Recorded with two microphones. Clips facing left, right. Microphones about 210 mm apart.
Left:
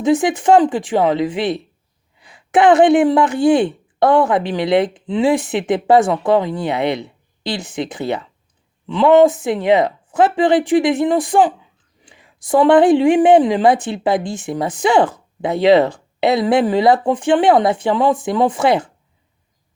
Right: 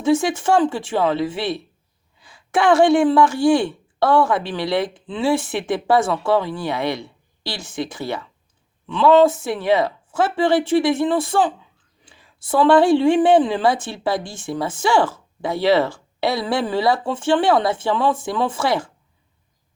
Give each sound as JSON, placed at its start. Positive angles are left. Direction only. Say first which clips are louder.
{"t": 0.0, "sound": "a woman's voice", "louder": "left 3 dB", "side_deg": 15}